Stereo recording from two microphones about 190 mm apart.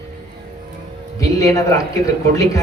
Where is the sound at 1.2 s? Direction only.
15° left (ahead or behind).